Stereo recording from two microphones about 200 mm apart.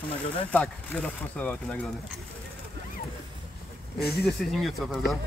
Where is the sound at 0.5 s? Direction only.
5° left (ahead or behind).